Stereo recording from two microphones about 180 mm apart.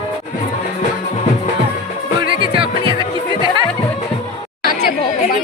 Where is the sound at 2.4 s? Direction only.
30° right (ahead or behind).